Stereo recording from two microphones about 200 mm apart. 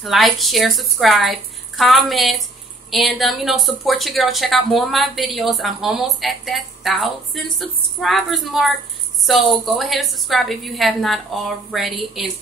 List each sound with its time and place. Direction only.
0.0 s a woman's voice: centre (ahead or behind)